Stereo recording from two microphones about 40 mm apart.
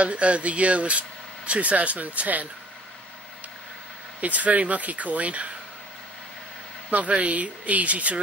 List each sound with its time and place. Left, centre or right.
0.0 s speech: right
4.2 s speech: right
6.9 s speech: right